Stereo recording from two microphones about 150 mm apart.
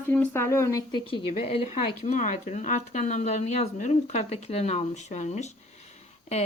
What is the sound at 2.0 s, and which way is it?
Speech, 55° left (ahead or behind).